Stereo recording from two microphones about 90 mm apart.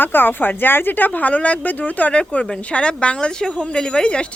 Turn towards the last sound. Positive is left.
turn(degrees=10)  # may be behind; listen again after turning